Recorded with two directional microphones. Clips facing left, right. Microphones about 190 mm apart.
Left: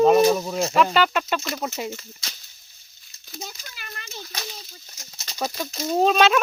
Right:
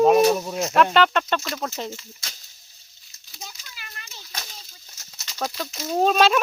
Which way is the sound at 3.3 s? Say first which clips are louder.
Left 5 dB; 50° left (ahead or behind).